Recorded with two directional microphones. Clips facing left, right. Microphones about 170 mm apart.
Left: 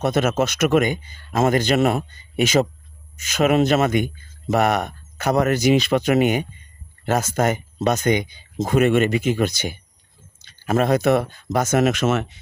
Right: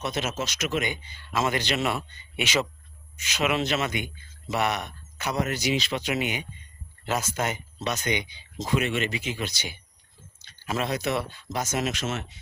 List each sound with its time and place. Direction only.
0.0 s speech: 55° left (ahead or behind)